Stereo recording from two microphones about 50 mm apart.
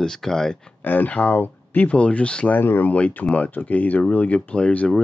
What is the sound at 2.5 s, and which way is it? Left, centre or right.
Speech, left.